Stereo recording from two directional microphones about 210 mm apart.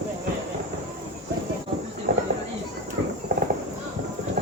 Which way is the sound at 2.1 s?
45° right (ahead or behind).